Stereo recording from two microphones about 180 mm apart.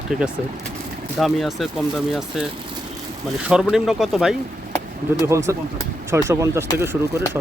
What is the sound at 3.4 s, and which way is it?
Speech, 5° right (ahead or behind).